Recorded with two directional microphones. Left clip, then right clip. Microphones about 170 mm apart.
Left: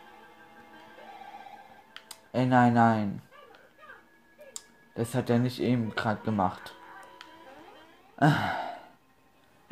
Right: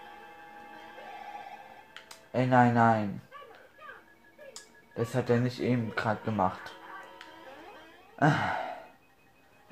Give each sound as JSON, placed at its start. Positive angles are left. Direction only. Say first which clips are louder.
{"t": 2.0, "sound": "speech", "louder": "even", "side_deg": 45}
{"t": 4.9, "sound": "speech", "louder": "even", "side_deg": 45}
{"t": 7.2, "sound": "a sound", "louder": "even", "side_deg": 55}
{"t": 8.2, "sound": "sigh", "louder": "left 1 dB", "side_deg": 50}